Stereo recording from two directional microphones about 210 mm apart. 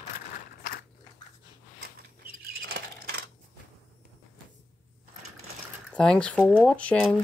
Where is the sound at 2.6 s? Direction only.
45° right (ahead or behind).